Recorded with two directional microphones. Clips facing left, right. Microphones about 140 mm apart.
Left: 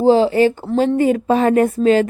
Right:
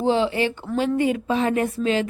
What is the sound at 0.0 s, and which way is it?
Speech, 40° left (ahead or behind).